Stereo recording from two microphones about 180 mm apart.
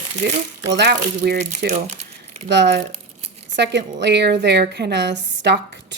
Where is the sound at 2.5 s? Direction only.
75° right (ahead or behind).